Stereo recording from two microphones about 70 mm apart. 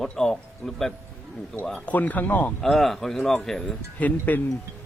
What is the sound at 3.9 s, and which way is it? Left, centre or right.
Speech, left.